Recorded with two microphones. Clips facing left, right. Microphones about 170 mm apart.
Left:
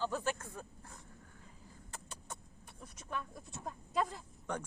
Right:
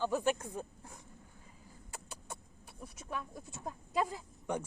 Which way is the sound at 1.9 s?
5° right (ahead or behind).